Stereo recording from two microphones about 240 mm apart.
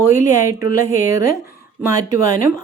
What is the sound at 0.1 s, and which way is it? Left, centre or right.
Speech, centre.